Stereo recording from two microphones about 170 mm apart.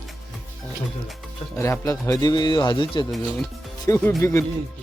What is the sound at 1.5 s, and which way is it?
Speech, 15° left (ahead or behind).